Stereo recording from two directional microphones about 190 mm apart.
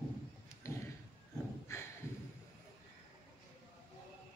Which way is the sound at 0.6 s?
15° left (ahead or behind).